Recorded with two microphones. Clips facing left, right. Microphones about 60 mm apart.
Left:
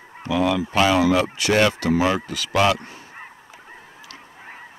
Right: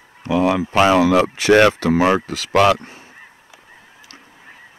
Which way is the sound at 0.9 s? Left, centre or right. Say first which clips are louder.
Right 4 dB; right.